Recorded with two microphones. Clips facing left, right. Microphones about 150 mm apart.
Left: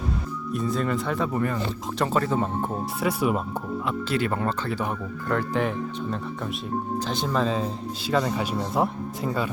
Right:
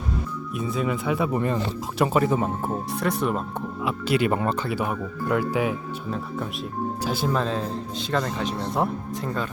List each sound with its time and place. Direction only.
0.5 s speech: 5° right (ahead or behind)
1.3 s speech: 20° right (ahead or behind)
3.0 s speech: 5° left (ahead or behind)
3.8 s speech: 15° right (ahead or behind); by 9.5 s 5° left (ahead or behind)